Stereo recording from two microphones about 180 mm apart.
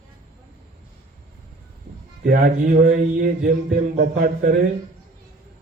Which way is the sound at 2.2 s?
55° right (ahead or behind).